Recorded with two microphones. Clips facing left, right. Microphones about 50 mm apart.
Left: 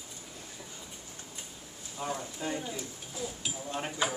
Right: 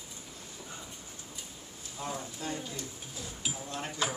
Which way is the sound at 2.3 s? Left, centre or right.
Centre.